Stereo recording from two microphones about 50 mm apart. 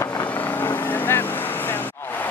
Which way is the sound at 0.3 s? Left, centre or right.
Left.